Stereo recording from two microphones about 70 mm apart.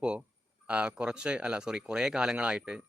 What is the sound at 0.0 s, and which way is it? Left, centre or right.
Speech, centre.